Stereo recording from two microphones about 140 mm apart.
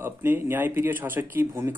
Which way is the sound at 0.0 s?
15° right (ahead or behind).